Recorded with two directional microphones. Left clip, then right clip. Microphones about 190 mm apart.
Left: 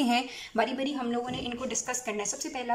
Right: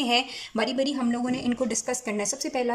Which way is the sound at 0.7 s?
25° right (ahead or behind).